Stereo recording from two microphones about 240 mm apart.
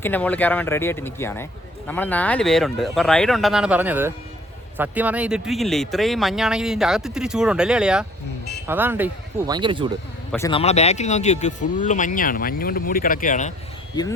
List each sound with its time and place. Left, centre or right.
0.0 s speech: centre
9.5 s speech: centre
10.3 s speech: centre
10.6 s speech: left